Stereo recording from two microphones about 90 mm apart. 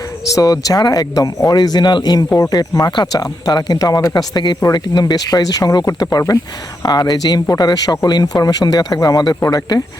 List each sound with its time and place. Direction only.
0.3 s speech: 45° left (ahead or behind)